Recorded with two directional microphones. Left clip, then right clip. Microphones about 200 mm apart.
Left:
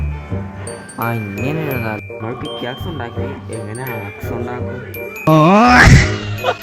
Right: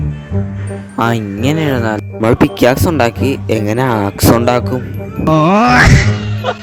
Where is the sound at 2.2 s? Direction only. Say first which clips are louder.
Right 17 dB; 60° right (ahead or behind).